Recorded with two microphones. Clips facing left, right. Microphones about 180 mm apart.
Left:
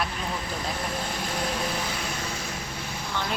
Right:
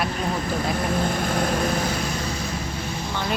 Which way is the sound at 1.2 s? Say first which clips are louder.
Right 6 dB; 50° right (ahead or behind).